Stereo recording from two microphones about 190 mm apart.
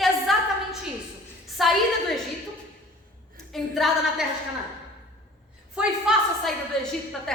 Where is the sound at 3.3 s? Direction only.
Centre (ahead or behind).